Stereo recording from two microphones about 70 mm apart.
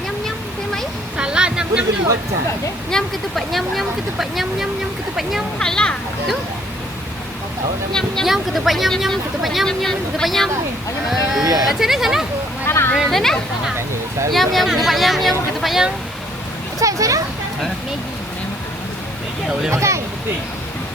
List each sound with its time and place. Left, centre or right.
0.3 s a sound: centre
1.1 s vehicle: centre
2.9 s speech: centre
5.5 s a child's voice: centre
7.9 s a child's voice: centre
8.3 s speech: centre
12.6 s a sound: left
13.1 s speech: centre
16.8 s speech: right
19.7 s speech: right